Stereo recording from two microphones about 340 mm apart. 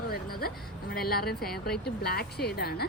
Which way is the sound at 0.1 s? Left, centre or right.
Left.